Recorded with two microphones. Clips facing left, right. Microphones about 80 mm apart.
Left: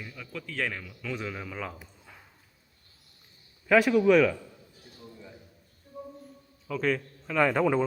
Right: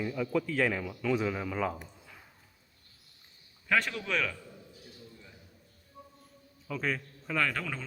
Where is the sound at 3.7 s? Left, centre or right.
Centre.